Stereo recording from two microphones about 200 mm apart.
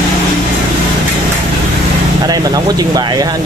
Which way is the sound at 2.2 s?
20° right (ahead or behind).